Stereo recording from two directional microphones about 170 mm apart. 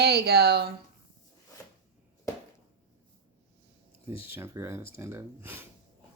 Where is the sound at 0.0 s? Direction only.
70° right (ahead or behind).